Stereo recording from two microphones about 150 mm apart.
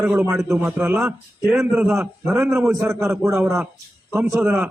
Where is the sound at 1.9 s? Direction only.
15° right (ahead or behind).